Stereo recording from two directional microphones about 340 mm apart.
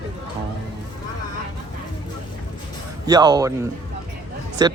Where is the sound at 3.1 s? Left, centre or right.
Centre.